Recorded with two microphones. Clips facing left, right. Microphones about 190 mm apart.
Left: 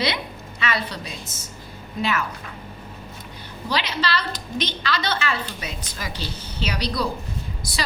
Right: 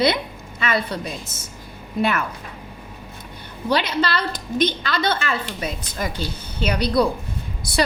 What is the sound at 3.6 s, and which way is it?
A woman's voice, 55° right (ahead or behind).